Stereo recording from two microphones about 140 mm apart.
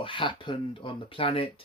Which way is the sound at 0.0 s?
35° left (ahead or behind).